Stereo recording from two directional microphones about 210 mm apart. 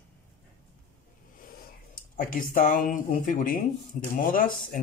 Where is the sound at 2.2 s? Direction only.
40° left (ahead or behind).